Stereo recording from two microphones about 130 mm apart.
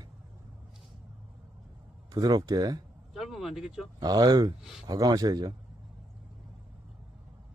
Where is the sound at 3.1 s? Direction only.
Centre (ahead or behind).